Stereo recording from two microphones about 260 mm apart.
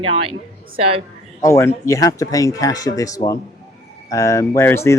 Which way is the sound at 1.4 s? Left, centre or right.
Centre.